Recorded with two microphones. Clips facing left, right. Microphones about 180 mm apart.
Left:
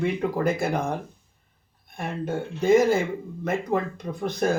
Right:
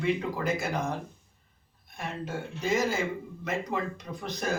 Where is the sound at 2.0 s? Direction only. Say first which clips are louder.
Left 6 dB; 55° left (ahead or behind).